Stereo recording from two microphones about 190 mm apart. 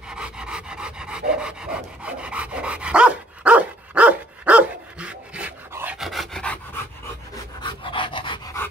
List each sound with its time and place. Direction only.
0.1 s dog: 5° right (ahead or behind)
7.6 s pant: 25° left (ahead or behind)